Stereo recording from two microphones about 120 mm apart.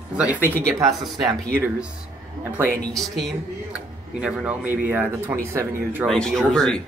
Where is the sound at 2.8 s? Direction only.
5° left (ahead or behind).